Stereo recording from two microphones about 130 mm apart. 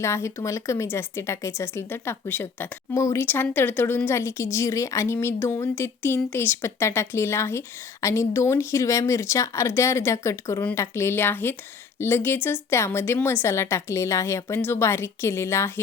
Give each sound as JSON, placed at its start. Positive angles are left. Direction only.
{"t": 0.0, "sound": "speech", "side_deg": 20}